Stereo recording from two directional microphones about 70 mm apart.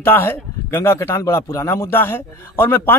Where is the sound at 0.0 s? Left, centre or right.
Left.